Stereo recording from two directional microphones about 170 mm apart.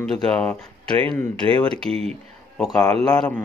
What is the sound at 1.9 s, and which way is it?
Speech, 35° right (ahead or behind).